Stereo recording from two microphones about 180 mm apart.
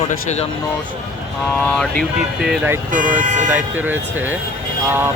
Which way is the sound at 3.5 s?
10° right (ahead or behind).